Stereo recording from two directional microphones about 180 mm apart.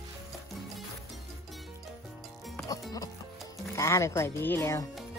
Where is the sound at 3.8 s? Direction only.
15° left (ahead or behind).